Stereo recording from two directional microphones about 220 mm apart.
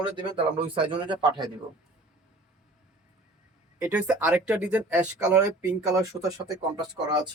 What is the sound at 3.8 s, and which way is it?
Speech, 5° right (ahead or behind).